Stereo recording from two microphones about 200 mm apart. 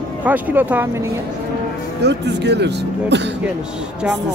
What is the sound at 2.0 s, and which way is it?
Speech, 60° right (ahead or behind).